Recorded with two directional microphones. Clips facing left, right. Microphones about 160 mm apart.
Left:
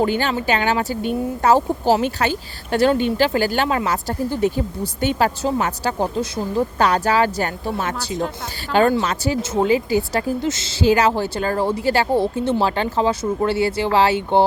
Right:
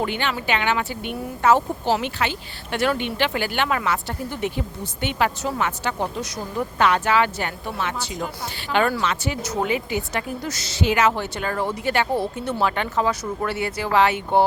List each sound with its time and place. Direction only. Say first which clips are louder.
0.0 s a woman's voice: left 6 dB; 40° left (ahead or behind)